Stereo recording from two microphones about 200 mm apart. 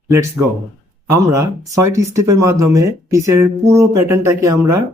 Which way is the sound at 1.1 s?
15° right (ahead or behind).